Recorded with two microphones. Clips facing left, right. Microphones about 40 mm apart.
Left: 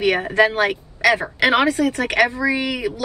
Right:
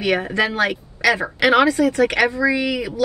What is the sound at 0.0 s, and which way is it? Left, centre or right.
A woman's voice, left.